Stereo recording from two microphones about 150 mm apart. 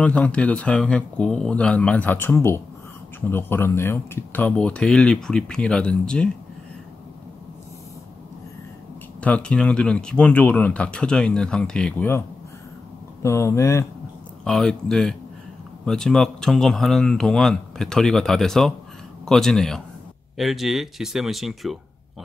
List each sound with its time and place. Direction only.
0.0 s speech: 10° left (ahead or behind)
9.2 s speech: 10° left (ahead or behind)
13.2 s speech: 20° left (ahead or behind)
14.4 s speech: 5° left (ahead or behind)